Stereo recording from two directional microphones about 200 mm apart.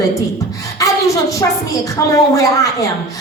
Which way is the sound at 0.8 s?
15° left (ahead or behind).